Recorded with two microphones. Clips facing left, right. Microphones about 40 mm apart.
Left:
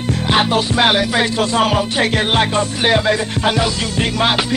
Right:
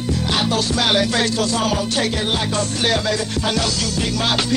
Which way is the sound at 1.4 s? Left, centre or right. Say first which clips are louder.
Left 4 dB; left.